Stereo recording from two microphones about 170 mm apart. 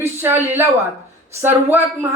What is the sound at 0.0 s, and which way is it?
Speech, 15° right (ahead or behind).